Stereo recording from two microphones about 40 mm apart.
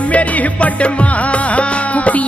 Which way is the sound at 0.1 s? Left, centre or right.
Left.